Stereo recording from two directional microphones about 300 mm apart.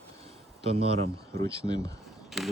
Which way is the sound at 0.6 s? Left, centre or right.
Centre.